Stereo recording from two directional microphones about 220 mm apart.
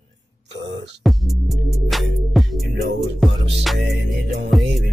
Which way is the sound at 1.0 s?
Centre (ahead or behind).